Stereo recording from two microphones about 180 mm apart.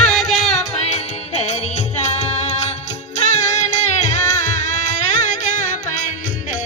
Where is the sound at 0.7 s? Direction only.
40° left (ahead or behind).